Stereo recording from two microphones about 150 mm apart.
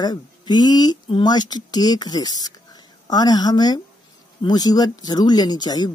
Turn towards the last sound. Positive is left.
turn(degrees=25)  # may be behind; listen again after turning